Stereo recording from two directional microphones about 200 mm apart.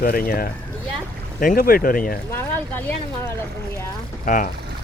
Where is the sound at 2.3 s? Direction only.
10° left (ahead or behind).